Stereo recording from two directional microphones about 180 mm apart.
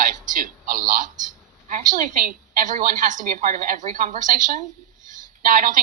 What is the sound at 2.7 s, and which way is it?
A man's voice, 45° right (ahead or behind).